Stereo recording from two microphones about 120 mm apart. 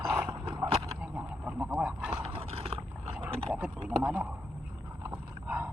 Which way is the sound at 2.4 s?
60° right (ahead or behind).